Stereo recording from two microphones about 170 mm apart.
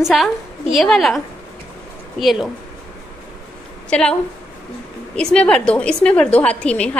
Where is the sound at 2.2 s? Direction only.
Centre (ahead or behind).